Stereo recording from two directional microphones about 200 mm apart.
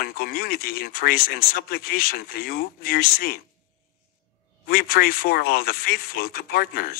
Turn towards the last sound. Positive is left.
turn(degrees=50)  # may be behind; listen again after turning